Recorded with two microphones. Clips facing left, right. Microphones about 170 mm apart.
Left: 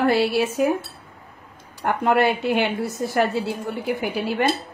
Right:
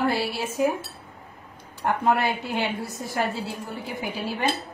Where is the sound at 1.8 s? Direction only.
70° left (ahead or behind).